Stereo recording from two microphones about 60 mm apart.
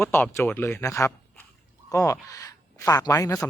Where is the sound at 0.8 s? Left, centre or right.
Left.